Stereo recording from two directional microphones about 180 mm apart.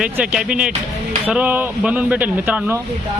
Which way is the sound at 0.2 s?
5° right (ahead or behind).